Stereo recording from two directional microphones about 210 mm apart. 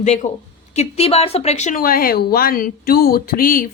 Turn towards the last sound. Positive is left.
turn(degrees=40)  # may be behind; listen again after turning